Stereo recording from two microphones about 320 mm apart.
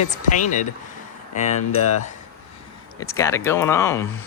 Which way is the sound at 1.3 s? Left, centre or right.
Left.